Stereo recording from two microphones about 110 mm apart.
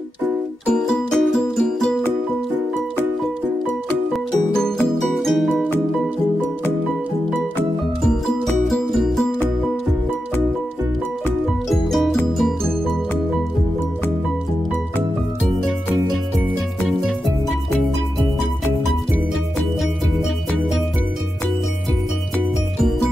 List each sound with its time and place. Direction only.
0.7 s music: 5° left (ahead or behind)
5.2 s music: 5° left (ahead or behind)
8.5 s music: centre (ahead or behind)
11.7 s music: centre (ahead or behind)